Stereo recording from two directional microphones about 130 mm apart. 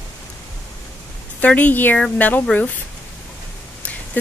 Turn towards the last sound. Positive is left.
turn(degrees=15)  # may be behind; listen again after turning